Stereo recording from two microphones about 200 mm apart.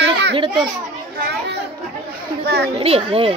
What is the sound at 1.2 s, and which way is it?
Chatter, 55° right (ahead or behind).